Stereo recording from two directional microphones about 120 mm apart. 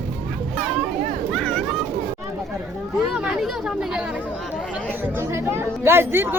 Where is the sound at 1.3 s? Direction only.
5° left (ahead or behind).